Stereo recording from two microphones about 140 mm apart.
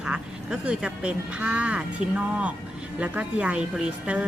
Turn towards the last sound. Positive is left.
turn(degrees=-5)  # may be behind; listen again after turning